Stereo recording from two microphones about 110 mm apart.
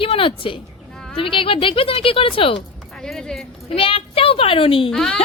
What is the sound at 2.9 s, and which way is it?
Speech, 5° left (ahead or behind).